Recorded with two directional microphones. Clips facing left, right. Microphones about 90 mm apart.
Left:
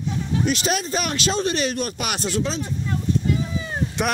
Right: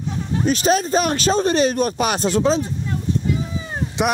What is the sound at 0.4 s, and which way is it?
Speech, 35° right (ahead or behind).